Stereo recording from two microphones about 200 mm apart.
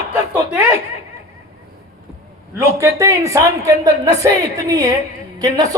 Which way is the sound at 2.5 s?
15° right (ahead or behind).